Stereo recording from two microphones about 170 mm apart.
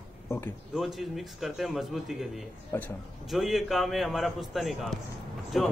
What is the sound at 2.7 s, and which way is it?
Speech, 15° left (ahead or behind).